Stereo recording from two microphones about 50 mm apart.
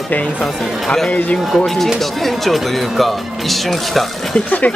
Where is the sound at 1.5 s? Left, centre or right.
Centre.